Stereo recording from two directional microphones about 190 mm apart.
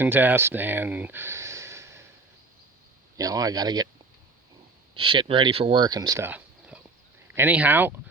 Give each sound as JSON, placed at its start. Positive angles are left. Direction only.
{"t": 0.0, "sound": "speech", "side_deg": -10}
{"t": 3.2, "sound": "speech", "side_deg": -20}
{"t": 4.9, "sound": "speech", "side_deg": -25}